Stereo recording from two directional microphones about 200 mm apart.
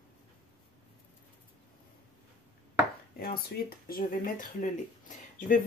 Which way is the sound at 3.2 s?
45° left (ahead or behind).